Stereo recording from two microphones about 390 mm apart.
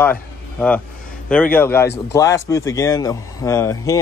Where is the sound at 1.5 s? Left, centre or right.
Centre.